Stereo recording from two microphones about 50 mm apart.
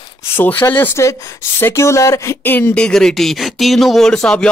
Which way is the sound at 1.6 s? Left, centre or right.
Left.